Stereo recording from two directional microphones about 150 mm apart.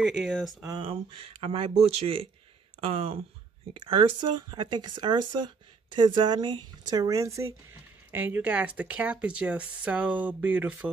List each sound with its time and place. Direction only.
0.0 s speech: centre (ahead or behind)
0.7 s speech: 35° right (ahead or behind); by 10.9 s 10° right (ahead or behind)